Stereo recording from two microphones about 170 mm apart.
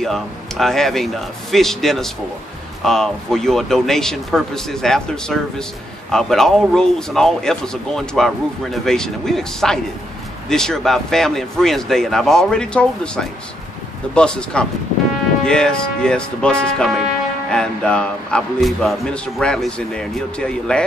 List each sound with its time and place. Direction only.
0.0 s speech: centre (ahead or behind)